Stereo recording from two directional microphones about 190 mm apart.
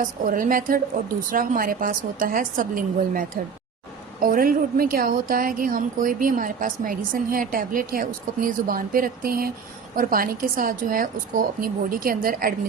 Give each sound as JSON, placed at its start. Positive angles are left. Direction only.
{"t": 0.0, "sound": "a woman's voice", "side_deg": -45}